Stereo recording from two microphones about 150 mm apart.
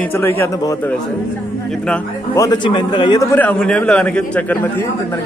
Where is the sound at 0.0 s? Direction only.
15° left (ahead or behind).